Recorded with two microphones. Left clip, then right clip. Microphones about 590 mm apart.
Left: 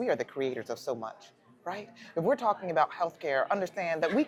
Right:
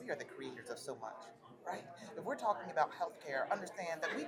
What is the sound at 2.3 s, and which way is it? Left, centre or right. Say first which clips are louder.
Speech: left 9 dB; left.